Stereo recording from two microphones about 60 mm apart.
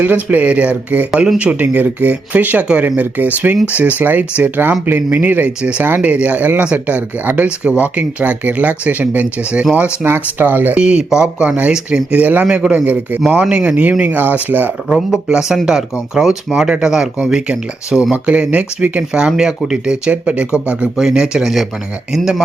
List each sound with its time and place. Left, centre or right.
0.0 s speech: right
10.8 s speech: centre
11.4 s speech: right
12.5 s speech: centre
12.8 s speech: right
14.0 s speech: right
15.3 s speech: centre
20.9 s speech: centre